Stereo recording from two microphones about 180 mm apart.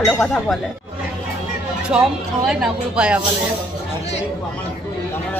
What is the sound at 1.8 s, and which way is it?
Speech, 5° right (ahead or behind).